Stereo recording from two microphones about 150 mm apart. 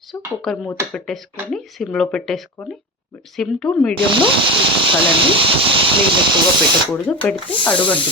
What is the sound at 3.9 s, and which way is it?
Speech, 35° right (ahead or behind).